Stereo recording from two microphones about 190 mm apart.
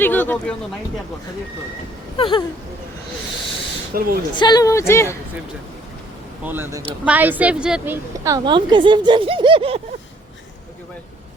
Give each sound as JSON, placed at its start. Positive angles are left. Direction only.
{"t": 0.0, "sound": "speech", "side_deg": 10}
{"t": 2.1, "sound": "a sound", "side_deg": 30}
{"t": 3.9, "sound": "a woman's voice", "side_deg": -50}
{"t": 4.4, "sound": "a woman's voice", "side_deg": 20}
{"t": 6.4, "sound": "a woman's voice", "side_deg": -10}
{"t": 8.2, "sound": "speech", "side_deg": -20}